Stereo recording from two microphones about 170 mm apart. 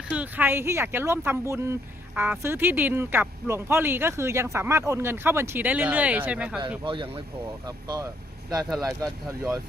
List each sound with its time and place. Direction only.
0.2 s speech: 10° right (ahead or behind)
6.8 s speech: 30° right (ahead or behind)